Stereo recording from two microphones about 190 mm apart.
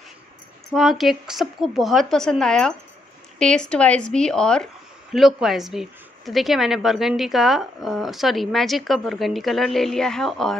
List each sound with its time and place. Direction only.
0.7 s a woman's voice: centre (ahead or behind)